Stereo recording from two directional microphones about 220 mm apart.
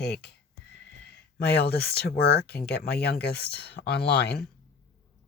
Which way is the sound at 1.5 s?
45° left (ahead or behind).